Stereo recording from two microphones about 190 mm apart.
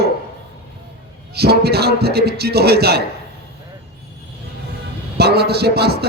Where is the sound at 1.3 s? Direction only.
55° right (ahead or behind).